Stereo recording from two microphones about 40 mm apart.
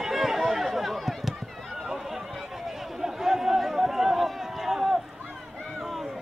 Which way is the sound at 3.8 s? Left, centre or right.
Centre.